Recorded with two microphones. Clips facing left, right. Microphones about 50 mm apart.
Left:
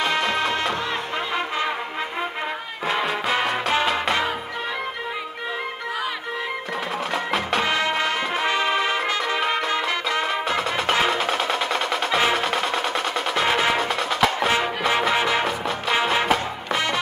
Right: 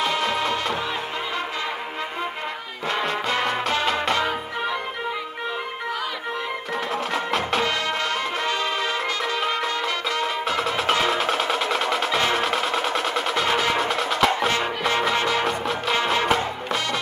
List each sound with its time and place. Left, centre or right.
0.0 s music: centre
2.9 s music: centre
7.2 s music: centre
7.6 s music: left
10.5 s music: centre
14.9 s music: centre